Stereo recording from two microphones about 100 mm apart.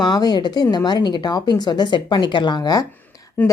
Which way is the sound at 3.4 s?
15° left (ahead or behind).